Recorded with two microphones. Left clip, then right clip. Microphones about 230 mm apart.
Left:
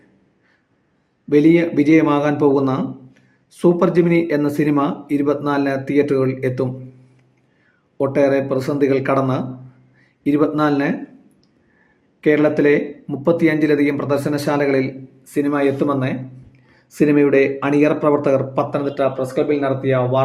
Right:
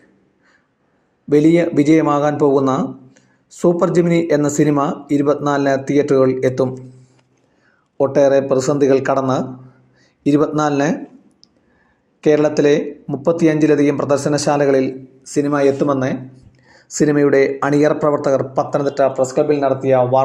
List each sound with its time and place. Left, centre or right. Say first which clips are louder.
1.7 s speech: right 1 dB; centre
2.0 s speech: right 1 dB; centre
2.2 s speech: right 2 dB; centre
3.2 s a sound: right 2 dB; centre
3.9 s speech: right 1 dB; centre
7.9 s speech: right 3 dB; centre
10.2 s speech: right 1 dB; centre
12.2 s speech: right 1 dB; centre
14.2 s speech: right 3 dB; centre
14.4 s speech: right 4 dB; centre